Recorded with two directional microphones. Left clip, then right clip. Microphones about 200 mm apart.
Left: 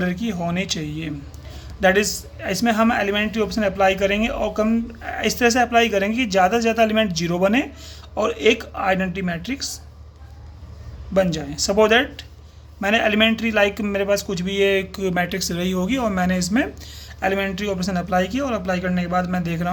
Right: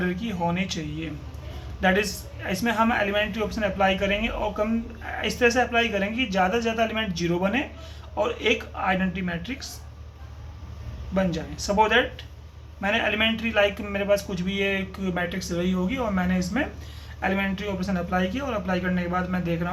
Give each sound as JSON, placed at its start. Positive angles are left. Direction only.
{"t": 0.0, "sound": "a man's voice", "side_deg": 55}
{"t": 11.1, "sound": "a man's voice", "side_deg": 60}